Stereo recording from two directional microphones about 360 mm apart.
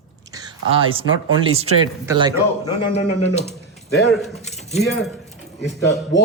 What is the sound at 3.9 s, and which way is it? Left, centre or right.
Speech, centre.